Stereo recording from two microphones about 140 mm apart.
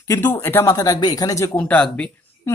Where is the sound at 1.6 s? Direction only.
10° left (ahead or behind).